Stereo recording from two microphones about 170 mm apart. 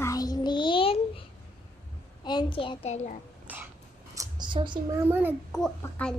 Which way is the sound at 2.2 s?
30° left (ahead or behind).